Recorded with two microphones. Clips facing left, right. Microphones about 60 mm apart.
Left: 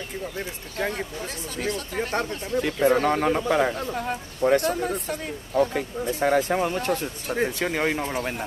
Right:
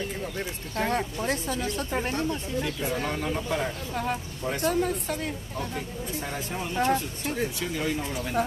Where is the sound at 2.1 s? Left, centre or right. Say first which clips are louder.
Left 3 dB; left.